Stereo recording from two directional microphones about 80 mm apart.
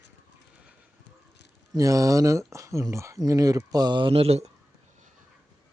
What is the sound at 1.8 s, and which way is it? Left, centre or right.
Speech, right.